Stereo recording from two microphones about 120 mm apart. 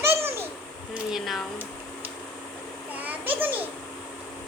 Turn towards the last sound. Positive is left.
turn(degrees=-15)  # may be behind; listen again after turning